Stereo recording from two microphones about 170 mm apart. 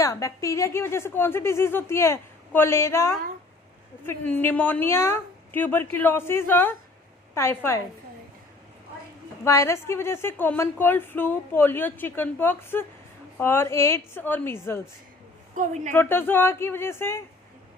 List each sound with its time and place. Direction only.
0.0 s a woman's voice: 20° left (ahead or behind)
9.4 s a woman's voice: 15° left (ahead or behind)
15.5 s a woman's voice: 45° right (ahead or behind)
16.0 s a woman's voice: 15° left (ahead or behind)